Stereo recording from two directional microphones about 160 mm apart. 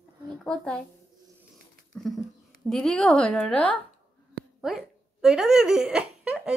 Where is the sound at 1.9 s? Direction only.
5° left (ahead or behind).